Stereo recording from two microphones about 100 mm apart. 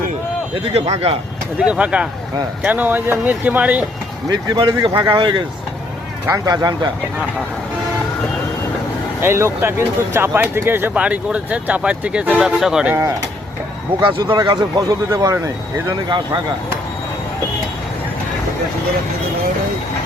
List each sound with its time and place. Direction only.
0.7 s speech: 90° right
1.5 s speech: 10° right (ahead or behind)
4.3 s speech: 50° right (ahead or behind)
6.2 s a man's voice: 35° right (ahead or behind)
9.2 s speech: 25° right (ahead or behind); by 12.9 s 5° right (ahead or behind)
14.0 s speech: 55° right (ahead or behind)
14.3 s a man's voice: 40° right (ahead or behind)
15.9 s speech: 50° right (ahead or behind)